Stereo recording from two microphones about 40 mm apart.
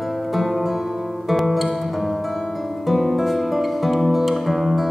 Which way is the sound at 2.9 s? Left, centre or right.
Centre.